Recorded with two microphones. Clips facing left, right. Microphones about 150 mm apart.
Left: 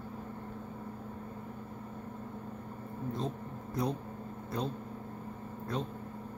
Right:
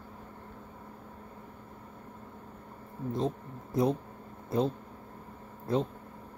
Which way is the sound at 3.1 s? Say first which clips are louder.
Right 5 dB; 25° right (ahead or behind).